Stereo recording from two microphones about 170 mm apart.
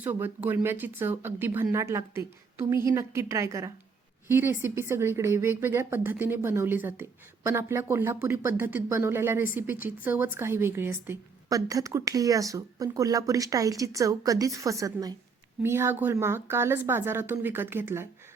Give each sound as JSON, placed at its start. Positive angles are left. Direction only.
{"t": 0.0, "sound": "a woman's voice", "side_deg": -10}